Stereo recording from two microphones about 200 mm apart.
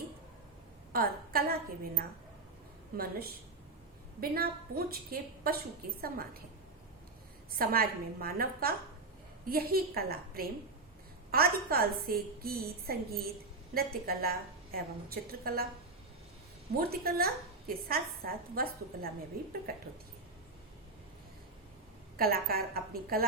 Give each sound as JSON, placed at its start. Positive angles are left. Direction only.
{"t": 0.9, "sound": "a woman's voice", "side_deg": -50}
{"t": 7.6, "sound": "a woman's voice", "side_deg": -50}
{"t": 16.7, "sound": "a woman's voice", "side_deg": -50}
{"t": 22.2, "sound": "a woman's voice", "side_deg": -50}